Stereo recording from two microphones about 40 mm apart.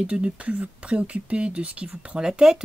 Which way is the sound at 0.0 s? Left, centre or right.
Right.